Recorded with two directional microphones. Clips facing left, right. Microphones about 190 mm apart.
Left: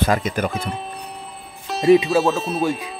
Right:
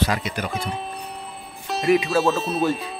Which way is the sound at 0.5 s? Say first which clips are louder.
Left 1 dB; centre (ahead or behind).